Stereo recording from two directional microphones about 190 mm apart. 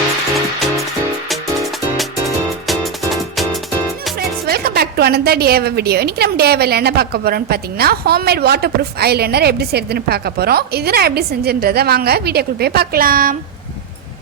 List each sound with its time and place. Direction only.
0.3 s music: centre (ahead or behind)
4.4 s a woman's voice: 55° right (ahead or behind)